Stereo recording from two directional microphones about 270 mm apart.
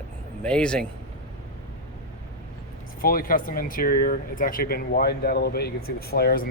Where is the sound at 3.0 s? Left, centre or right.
Left.